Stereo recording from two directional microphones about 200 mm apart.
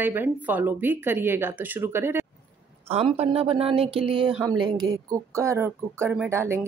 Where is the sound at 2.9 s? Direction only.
30° right (ahead or behind).